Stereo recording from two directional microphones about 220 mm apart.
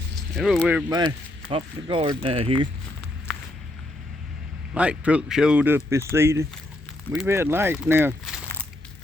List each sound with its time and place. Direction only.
0.3 s speech: centre (ahead or behind)
0.9 s speech: 20° right (ahead or behind)
4.7 s speech: 5° right (ahead or behind)